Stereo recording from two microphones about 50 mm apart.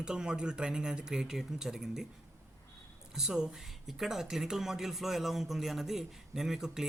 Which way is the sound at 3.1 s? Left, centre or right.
Centre.